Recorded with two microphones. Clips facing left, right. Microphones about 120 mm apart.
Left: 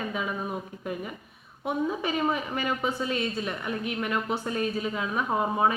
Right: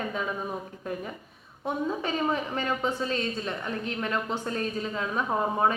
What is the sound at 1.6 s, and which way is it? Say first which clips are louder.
A woman's voice: left 1 dB; 15° left (ahead or behind).